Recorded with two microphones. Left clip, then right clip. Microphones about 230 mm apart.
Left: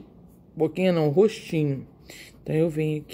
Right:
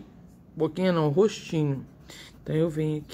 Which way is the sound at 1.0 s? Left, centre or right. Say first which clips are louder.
Left 2 dB; centre.